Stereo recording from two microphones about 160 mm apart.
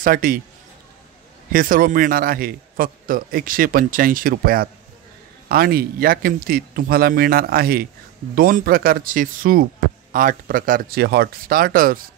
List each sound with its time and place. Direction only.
0.0 s a man's voice: 65° right (ahead or behind)
1.5 s a man's voice: 60° right (ahead or behind)